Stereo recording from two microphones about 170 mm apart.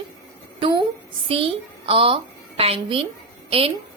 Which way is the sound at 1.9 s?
30° right (ahead or behind).